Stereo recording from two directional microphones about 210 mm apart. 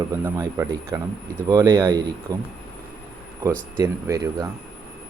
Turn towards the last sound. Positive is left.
turn(degrees=-15)  # may be behind; listen again after turning